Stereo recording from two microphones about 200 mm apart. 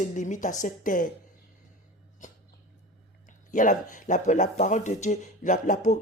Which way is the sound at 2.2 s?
40° left (ahead or behind).